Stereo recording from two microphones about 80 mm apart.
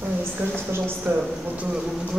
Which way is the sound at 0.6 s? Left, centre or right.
Right.